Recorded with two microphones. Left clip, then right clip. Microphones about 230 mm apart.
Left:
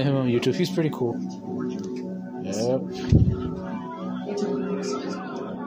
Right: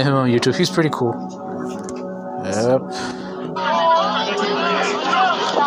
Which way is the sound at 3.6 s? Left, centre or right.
Right.